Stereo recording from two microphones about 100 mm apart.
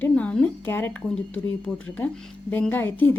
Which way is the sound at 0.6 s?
25° left (ahead or behind).